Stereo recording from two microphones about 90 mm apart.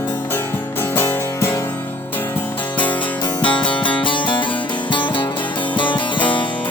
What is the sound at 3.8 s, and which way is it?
Music, 65° left (ahead or behind).